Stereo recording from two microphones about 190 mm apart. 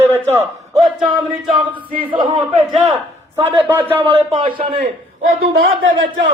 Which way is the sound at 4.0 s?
30° right (ahead or behind).